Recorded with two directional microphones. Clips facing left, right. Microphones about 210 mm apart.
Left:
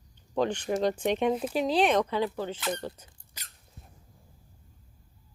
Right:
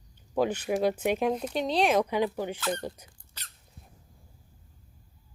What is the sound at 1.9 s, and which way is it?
Speech, 15° right (ahead or behind).